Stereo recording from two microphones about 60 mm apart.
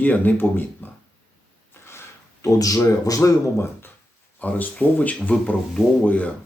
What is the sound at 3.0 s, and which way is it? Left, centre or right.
Speech, left.